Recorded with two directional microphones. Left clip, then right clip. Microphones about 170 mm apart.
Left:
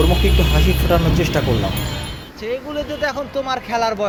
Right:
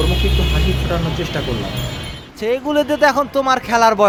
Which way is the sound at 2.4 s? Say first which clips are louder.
Right 7 dB; 45° right (ahead or behind).